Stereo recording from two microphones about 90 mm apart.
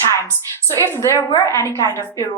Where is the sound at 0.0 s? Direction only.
30° left (ahead or behind).